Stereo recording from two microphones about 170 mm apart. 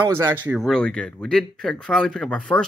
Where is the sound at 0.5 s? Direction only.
Centre (ahead or behind).